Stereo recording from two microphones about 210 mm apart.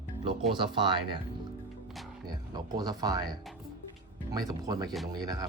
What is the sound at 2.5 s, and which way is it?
Speech, 20° right (ahead or behind).